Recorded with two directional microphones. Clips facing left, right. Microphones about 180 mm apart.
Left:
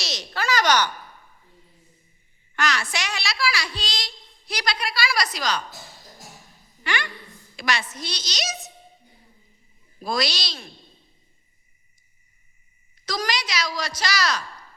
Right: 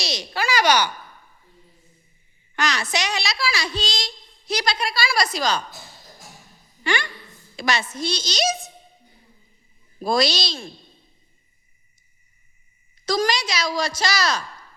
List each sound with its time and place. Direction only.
0.0 s a sound: 15° right (ahead or behind)
2.6 s a woman's voice: 20° right (ahead or behind)
6.8 s a woman's voice: 30° right (ahead or behind)
10.0 s a woman's voice: 30° right (ahead or behind)
13.1 s a woman's voice: 25° right (ahead or behind)